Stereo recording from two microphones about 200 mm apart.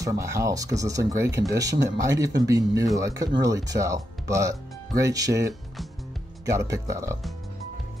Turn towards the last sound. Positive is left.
turn(degrees=-15)  # may be behind; listen again after turning